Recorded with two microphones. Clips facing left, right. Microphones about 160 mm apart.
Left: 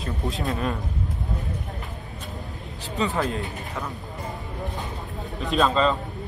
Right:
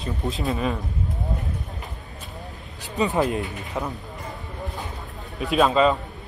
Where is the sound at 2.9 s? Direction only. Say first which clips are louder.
Right 3 dB; 20° right (ahead or behind).